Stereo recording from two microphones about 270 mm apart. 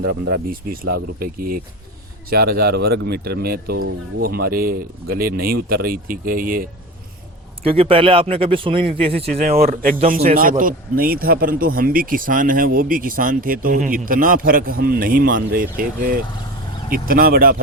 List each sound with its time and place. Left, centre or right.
0.0 s a man's voice: right
7.7 s a man's voice: centre